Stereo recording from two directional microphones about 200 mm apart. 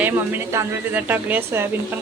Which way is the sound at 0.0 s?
10° right (ahead or behind).